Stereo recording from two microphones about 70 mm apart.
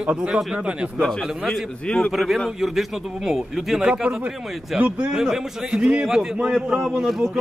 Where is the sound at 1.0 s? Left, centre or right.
Centre.